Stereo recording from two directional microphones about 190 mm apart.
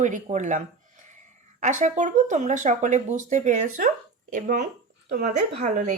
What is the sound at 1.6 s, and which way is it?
A woman's voice, 40° right (ahead or behind).